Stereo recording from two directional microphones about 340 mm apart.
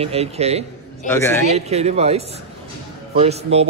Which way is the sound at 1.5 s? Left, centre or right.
Centre.